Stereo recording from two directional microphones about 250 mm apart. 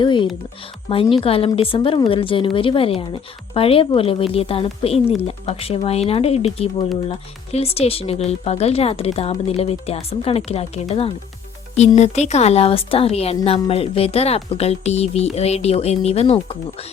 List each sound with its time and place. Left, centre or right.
0.0 s speech: centre